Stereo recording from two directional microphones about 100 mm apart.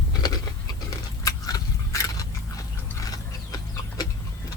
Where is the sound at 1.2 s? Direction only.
35° left (ahead or behind).